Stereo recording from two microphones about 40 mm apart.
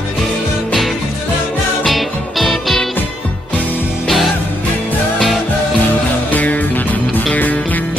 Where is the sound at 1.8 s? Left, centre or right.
Centre.